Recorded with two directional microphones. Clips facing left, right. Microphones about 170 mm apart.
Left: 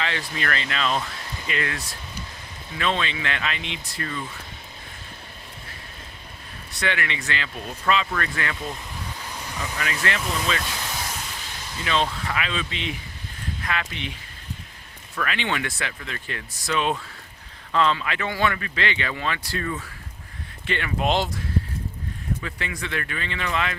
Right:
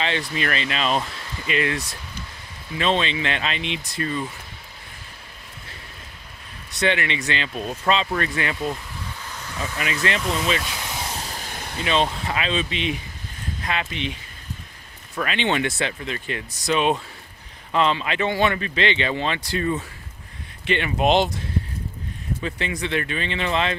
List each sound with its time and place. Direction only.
0.0 s speech: 20° right (ahead or behind)
6.7 s speech: 20° right (ahead or behind)
9.7 s speech: 20° right (ahead or behind)
11.2 s a sound: 40° right (ahead or behind); by 11.9 s 60° right (ahead or behind)
11.9 s speech: 20° right (ahead or behind)
15.1 s speech: 20° right (ahead or behind)
22.4 s speech: 25° right (ahead or behind)